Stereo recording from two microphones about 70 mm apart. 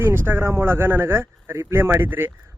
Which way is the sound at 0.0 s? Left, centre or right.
Right.